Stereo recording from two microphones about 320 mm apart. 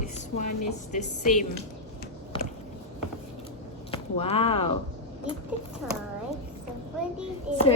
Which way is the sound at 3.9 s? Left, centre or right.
Centre.